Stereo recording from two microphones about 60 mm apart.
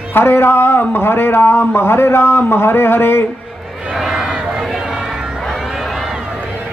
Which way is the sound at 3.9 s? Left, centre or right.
Centre.